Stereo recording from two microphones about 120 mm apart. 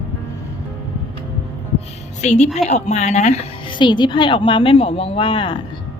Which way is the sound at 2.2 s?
70° left (ahead or behind).